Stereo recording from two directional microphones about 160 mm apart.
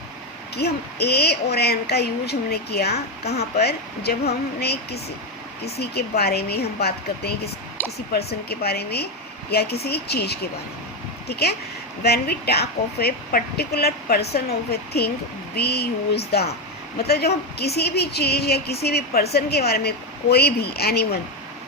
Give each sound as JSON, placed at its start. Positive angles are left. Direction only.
{"t": 0.5, "sound": "a woman's voice", "side_deg": 90}